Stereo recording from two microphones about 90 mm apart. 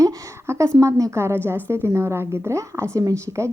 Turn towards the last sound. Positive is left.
turn(degrees=-35)  # may be behind; listen again after turning